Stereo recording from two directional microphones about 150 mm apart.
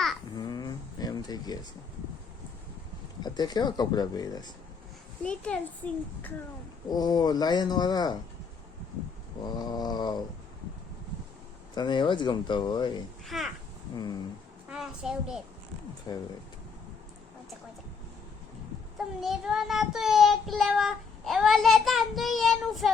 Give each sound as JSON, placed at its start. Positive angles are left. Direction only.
{"t": 0.3, "sound": "a sound", "side_deg": 25}
{"t": 3.2, "sound": "speech", "side_deg": 30}
{"t": 5.2, "sound": "a child's voice", "side_deg": 10}
{"t": 6.9, "sound": "speech", "side_deg": 25}
{"t": 9.4, "sound": "speech", "side_deg": 25}
{"t": 11.7, "sound": "speech", "side_deg": 30}
{"t": 13.2, "sound": "child singing", "side_deg": 0}
{"t": 13.9, "sound": "speech", "side_deg": 25}
{"t": 14.7, "sound": "a child's voice", "side_deg": -5}
{"t": 16.1, "sound": "speech", "side_deg": 25}
{"t": 18.9, "sound": "child singing", "side_deg": 0}